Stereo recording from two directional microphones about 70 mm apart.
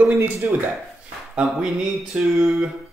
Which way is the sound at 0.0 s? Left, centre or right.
Right.